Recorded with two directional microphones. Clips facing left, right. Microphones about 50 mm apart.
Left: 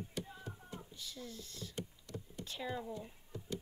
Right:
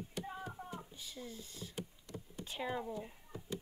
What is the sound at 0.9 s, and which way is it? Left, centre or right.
Speech, centre.